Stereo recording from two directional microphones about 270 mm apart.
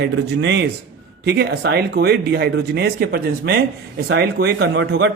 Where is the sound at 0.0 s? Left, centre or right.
Right.